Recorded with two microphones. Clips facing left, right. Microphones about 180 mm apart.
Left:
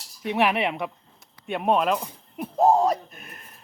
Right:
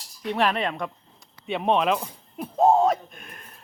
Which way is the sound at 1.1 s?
Centre (ahead or behind).